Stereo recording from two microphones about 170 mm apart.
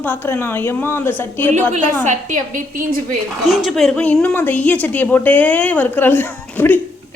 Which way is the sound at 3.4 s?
Centre (ahead or behind).